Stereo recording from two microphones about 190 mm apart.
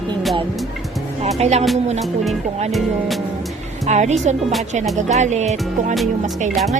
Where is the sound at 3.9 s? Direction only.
40° right (ahead or behind).